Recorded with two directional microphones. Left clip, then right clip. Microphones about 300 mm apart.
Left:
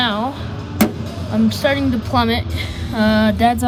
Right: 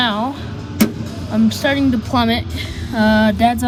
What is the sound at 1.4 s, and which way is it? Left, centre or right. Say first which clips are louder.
A woman's voice: right 1 dB; centre.